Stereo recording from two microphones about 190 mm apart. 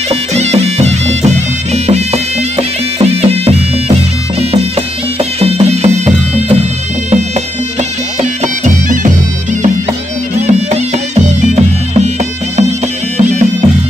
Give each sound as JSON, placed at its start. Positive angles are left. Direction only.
{"t": 0.1, "sound": "music", "side_deg": -35}
{"t": 5.4, "sound": "music", "side_deg": -35}
{"t": 8.2, "sound": "bagpipes", "side_deg": -40}
{"t": 10.4, "sound": "music", "side_deg": -40}
{"t": 13.2, "sound": "bagpipes", "side_deg": -40}